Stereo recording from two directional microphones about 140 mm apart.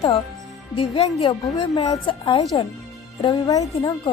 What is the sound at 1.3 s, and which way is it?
Speech, 35° left (ahead or behind).